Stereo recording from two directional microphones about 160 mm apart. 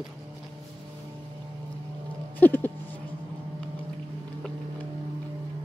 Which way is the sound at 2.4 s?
10° left (ahead or behind).